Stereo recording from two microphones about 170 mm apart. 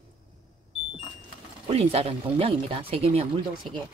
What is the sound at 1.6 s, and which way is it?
Speech, 35° right (ahead or behind).